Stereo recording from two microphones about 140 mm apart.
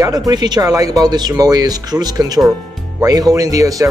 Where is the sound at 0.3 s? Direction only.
30° right (ahead or behind).